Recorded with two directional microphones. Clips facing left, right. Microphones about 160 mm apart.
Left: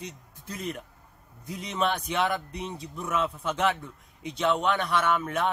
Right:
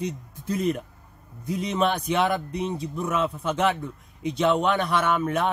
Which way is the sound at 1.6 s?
10° right (ahead or behind).